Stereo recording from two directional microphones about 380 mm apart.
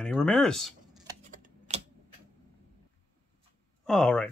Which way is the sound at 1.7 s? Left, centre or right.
Centre.